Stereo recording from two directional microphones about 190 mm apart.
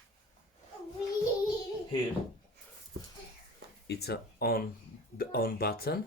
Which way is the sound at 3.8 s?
60° left (ahead or behind).